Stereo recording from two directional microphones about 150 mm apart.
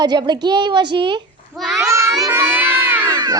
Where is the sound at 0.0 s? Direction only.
30° right (ahead or behind).